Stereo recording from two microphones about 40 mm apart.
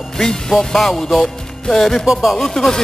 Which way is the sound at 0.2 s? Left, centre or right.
Centre.